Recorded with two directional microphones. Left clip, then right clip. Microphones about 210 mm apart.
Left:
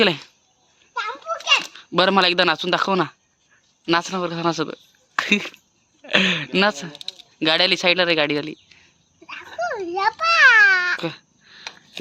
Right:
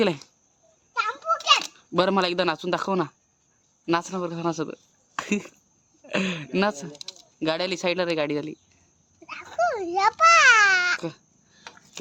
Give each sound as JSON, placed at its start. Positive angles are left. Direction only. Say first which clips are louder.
{"t": 0.0, "sound": "speech", "louder": "left 6 dB", "side_deg": 0}
{"t": 1.5, "sound": "speech", "louder": "left 4 dB", "side_deg": 0}
{"t": 7.3, "sound": "a sound", "louder": "left 8 dB", "side_deg": 5}
{"t": 11.0, "sound": "babbling", "louder": "left 6 dB", "side_deg": 0}